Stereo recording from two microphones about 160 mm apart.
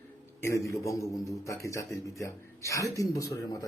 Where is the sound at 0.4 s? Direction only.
20° left (ahead or behind).